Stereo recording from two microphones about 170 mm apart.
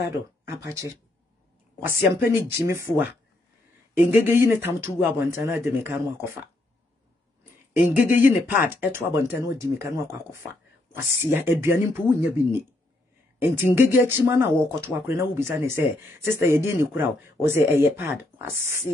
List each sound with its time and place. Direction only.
0.0 s speech: 15° right (ahead or behind)
1.9 s speech: 15° right (ahead or behind)
7.9 s speech: 10° right (ahead or behind)